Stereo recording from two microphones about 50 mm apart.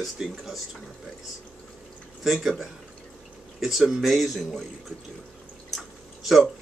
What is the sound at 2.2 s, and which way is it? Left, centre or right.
Speech, centre.